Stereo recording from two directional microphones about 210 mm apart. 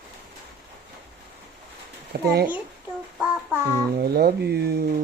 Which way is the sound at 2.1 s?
50° right (ahead or behind).